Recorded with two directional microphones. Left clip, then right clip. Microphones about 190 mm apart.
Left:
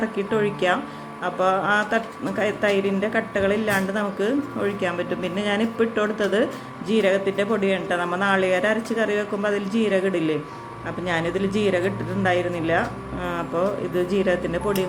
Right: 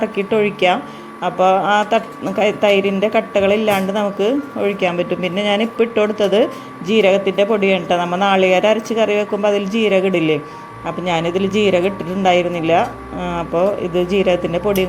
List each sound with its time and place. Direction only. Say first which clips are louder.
0.2 s speech: right 7 dB; 15° right (ahead or behind)